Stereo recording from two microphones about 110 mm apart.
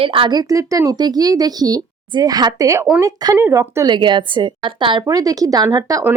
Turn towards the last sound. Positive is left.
turn(degrees=-35)  # may be behind; listen again after turning